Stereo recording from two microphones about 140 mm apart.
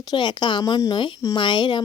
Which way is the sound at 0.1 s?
35° left (ahead or behind).